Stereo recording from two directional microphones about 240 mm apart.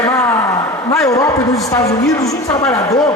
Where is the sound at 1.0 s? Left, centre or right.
Centre.